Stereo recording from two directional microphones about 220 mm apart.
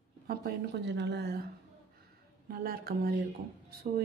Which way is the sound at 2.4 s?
45° right (ahead or behind).